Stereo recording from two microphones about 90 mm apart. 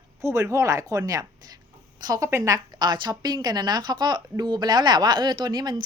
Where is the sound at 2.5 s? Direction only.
50° right (ahead or behind).